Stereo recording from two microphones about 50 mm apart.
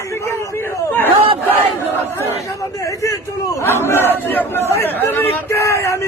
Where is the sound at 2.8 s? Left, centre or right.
Left.